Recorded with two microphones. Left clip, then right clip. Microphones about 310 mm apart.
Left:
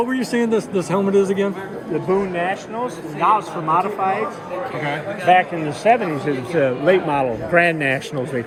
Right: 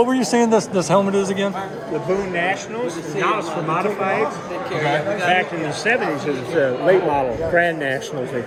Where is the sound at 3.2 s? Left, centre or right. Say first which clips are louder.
Left 4 dB; centre.